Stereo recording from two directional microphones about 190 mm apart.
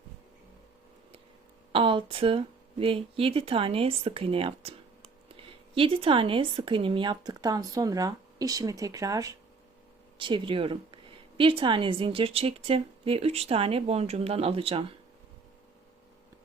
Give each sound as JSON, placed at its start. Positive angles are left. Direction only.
{"t": 1.7, "sound": "speech", "side_deg": -25}